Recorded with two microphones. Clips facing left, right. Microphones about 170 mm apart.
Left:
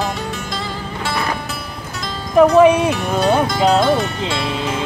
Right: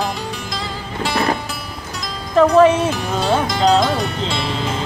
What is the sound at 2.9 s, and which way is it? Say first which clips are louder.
Speech: left 2 dB; 5° left (ahead or behind).